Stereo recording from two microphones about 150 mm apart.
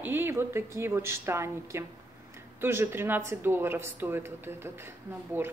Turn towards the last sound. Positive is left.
turn(degrees=-15)  # may be behind; listen again after turning